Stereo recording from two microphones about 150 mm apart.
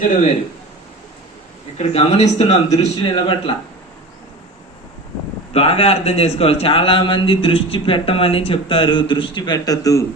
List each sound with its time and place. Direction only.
1.8 s speech: 45° left (ahead or behind)
3.0 s a man's voice: 35° left (ahead or behind)
5.5 s a man's voice: 40° left (ahead or behind); by 10.1 s 20° left (ahead or behind)